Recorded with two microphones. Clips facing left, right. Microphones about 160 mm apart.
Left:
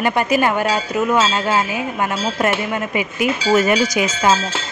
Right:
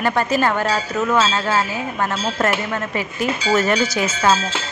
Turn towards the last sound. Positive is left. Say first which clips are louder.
# left 1 dB
turn(degrees=15)  # may be behind; listen again after turning